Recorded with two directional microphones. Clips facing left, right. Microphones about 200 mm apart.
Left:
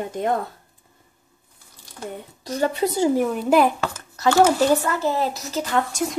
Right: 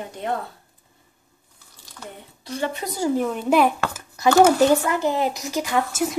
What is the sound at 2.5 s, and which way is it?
Speech, 40° left (ahead or behind).